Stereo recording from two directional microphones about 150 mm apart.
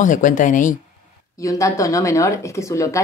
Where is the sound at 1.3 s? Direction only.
20° left (ahead or behind).